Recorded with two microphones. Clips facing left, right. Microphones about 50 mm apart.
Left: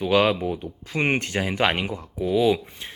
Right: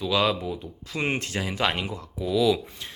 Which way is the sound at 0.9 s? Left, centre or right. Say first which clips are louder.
Left 4 dB; left.